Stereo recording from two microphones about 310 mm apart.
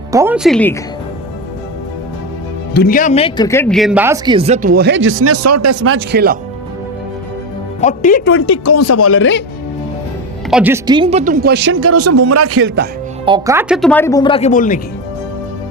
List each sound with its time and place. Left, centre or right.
0.1 s speech: centre
2.7 s speech: left; by 6.3 s right
7.8 s speech: left
8.4 s speech: left
10.5 s speech: centre; by 12.9 s right
13.2 s speech: centre; by 14.8 s left